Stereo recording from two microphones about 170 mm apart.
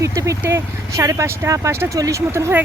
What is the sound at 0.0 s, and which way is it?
Speech, 20° right (ahead or behind).